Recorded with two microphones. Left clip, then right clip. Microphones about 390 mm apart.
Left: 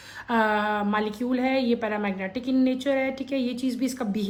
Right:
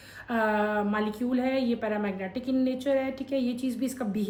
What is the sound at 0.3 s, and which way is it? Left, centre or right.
A woman's voice, centre.